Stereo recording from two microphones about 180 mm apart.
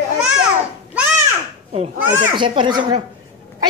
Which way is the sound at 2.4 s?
25° right (ahead or behind).